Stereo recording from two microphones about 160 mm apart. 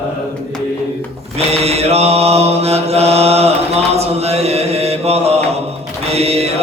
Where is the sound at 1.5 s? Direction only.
40° right (ahead or behind).